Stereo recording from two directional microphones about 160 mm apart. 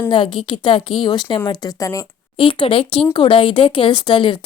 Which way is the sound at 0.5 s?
30° left (ahead or behind).